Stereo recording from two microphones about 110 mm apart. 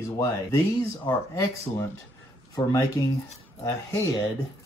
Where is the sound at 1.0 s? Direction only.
30° left (ahead or behind).